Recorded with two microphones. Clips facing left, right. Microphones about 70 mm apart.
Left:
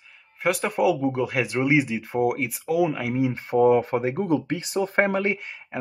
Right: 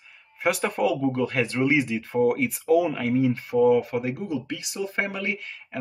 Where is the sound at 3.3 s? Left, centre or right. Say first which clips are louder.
Left 3 dB; left.